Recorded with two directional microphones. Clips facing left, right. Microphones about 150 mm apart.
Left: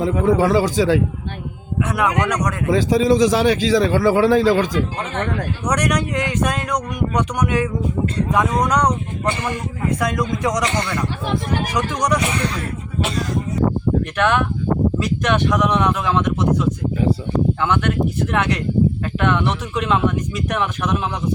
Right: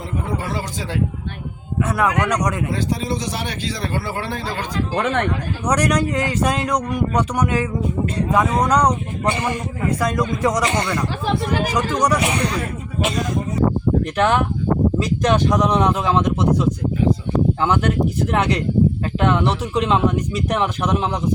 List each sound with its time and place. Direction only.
0.0 s speech: 90° left
1.8 s speech: 5° right (ahead or behind)
2.6 s speech: 90° left
4.9 s speech: 70° right (ahead or behind)
5.6 s speech: 10° right (ahead or behind)
14.2 s speech: 30° right (ahead or behind)